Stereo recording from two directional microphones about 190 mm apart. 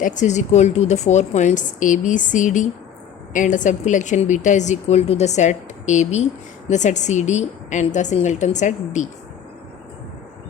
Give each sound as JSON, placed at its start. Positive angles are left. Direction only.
{"t": 0.0, "sound": "a woman's voice", "side_deg": 40}